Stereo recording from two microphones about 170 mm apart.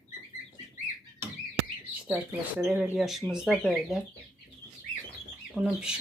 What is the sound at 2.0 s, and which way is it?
Speech, 5° right (ahead or behind).